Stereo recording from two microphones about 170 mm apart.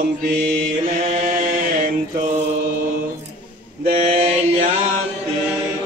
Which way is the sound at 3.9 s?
35° right (ahead or behind).